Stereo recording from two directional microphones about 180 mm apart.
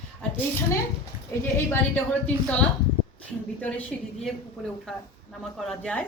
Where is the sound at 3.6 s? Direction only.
5° left (ahead or behind).